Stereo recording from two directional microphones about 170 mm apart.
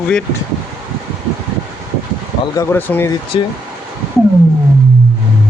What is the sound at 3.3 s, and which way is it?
Speech, 30° left (ahead or behind).